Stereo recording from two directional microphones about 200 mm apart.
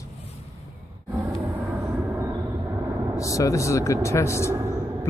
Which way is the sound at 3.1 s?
15° left (ahead or behind).